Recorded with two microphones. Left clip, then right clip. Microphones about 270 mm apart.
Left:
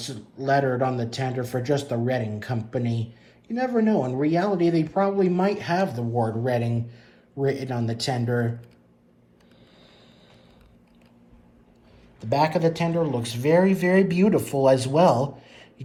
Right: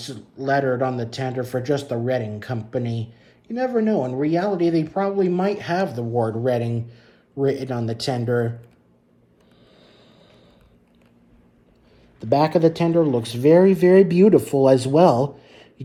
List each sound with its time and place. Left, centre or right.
0.0 s speech: centre
12.2 s speech: centre
13.0 s speech: right
13.2 s speech: centre
14.2 s speech: right
14.9 s a sound: centre